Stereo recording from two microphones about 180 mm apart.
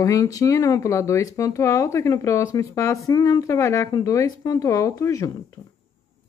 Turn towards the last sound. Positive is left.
turn(degrees=20)  # may be behind; listen again after turning